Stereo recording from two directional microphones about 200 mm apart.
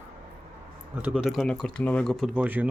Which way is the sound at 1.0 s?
5° right (ahead or behind).